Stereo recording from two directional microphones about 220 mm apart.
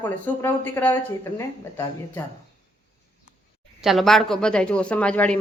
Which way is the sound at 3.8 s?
Centre (ahead or behind).